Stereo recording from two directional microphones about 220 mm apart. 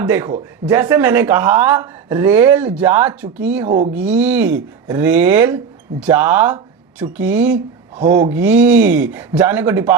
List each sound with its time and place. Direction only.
0.0 s speech: 10° right (ahead or behind)
3.7 s speech: 30° right (ahead or behind)
3.9 s speech: 5° right (ahead or behind)
8.0 s speech: 40° right (ahead or behind)
8.3 s speech: 5° right (ahead or behind)